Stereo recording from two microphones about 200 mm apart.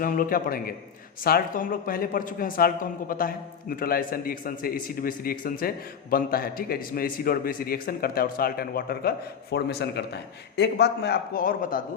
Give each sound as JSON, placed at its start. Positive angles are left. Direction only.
{"t": 0.0, "sound": "a man's voice", "side_deg": 45}